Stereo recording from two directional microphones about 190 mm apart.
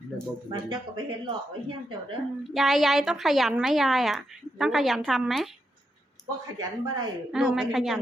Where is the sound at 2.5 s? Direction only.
Centre (ahead or behind).